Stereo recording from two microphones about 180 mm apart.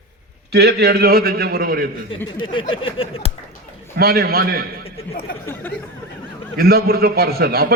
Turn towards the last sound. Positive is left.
turn(degrees=-60)  # may be behind; listen again after turning